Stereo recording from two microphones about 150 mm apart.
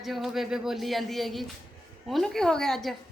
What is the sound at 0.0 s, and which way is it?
Speech, centre (ahead or behind).